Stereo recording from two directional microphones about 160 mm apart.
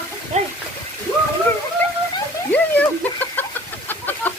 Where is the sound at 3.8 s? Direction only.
10° left (ahead or behind).